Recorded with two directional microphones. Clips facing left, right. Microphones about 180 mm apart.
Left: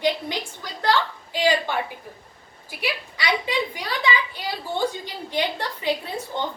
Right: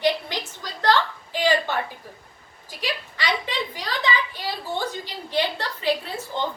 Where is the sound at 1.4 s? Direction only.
10° left (ahead or behind).